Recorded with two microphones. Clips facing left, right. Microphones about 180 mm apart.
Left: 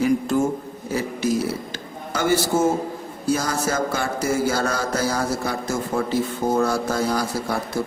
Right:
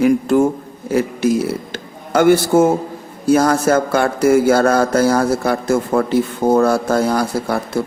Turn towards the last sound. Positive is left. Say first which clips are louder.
# right 5 dB
turn(degrees=-60)  # may be behind; listen again after turning